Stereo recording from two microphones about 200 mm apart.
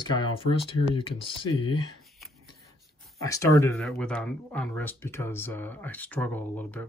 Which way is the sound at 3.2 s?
15° left (ahead or behind).